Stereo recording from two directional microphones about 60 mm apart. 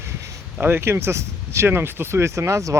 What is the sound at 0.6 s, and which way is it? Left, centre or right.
Speech, right.